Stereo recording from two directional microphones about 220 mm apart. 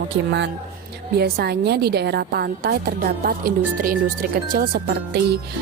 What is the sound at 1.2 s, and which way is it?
A woman's voice, 45° right (ahead or behind).